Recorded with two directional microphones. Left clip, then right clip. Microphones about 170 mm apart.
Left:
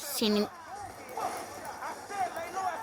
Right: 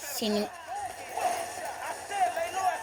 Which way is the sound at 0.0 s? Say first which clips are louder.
Left 1 dB; 25° left (ahead or behind).